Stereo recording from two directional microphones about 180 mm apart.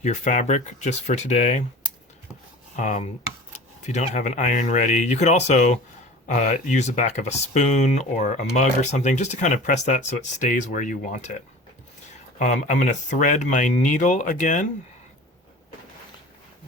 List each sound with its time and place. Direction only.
0.0 s speech: 40° left (ahead or behind)
2.7 s speech: 40° left (ahead or behind)
12.4 s speech: 40° left (ahead or behind)